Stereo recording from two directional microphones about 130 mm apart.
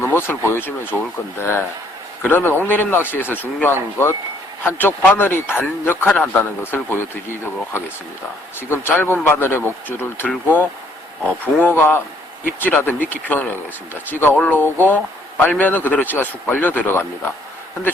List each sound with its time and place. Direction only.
0.0 s speech: 20° left (ahead or behind)
8.7 s speech: 15° left (ahead or behind)